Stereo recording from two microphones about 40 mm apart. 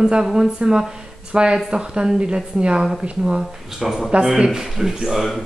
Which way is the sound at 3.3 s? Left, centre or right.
Centre.